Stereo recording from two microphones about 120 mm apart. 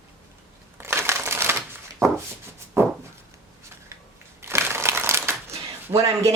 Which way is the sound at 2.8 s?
20° right (ahead or behind).